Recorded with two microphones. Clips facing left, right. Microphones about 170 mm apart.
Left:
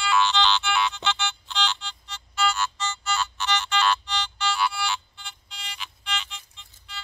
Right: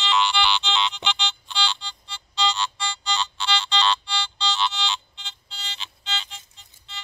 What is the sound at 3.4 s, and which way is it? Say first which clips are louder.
Ringtone: even; 10° right (ahead or behind).